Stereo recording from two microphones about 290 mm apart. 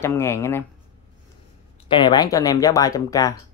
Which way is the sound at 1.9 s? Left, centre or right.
Centre.